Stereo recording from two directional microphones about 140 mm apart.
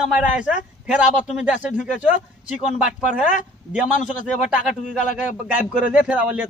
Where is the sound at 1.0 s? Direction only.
60° left (ahead or behind).